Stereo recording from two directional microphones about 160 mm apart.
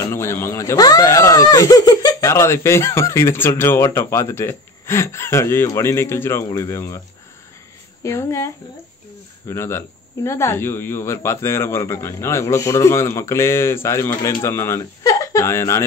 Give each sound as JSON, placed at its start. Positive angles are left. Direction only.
{"t": 0.0, "sound": "speech", "side_deg": 15}
{"t": 8.0, "sound": "speech", "side_deg": 15}